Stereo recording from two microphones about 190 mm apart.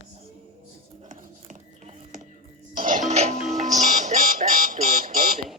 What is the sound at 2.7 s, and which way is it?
Music, 45° right (ahead or behind).